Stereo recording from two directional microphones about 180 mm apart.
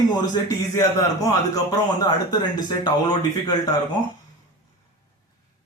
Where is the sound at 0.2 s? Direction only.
20° left (ahead or behind).